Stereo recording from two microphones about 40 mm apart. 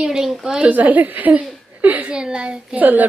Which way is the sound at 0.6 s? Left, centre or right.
Right.